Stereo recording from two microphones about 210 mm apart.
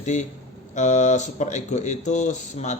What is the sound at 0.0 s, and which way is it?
Speech, 35° left (ahead or behind).